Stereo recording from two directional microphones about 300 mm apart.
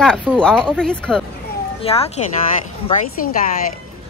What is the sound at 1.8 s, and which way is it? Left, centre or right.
Speech, centre.